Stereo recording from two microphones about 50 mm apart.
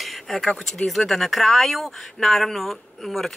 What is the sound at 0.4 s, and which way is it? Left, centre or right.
Speech, centre.